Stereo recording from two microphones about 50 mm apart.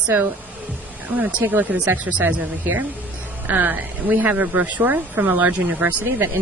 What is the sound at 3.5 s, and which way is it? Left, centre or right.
Speech, right.